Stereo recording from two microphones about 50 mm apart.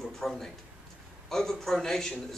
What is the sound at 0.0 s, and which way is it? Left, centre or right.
A man's voice, centre.